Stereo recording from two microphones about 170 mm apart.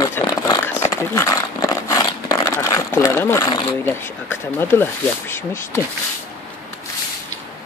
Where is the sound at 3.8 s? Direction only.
10° left (ahead or behind).